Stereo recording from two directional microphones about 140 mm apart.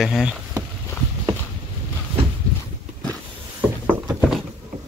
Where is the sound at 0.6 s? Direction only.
25° right (ahead or behind).